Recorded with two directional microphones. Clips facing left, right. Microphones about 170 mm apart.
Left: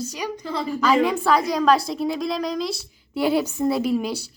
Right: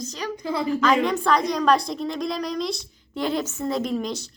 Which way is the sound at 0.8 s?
5° left (ahead or behind).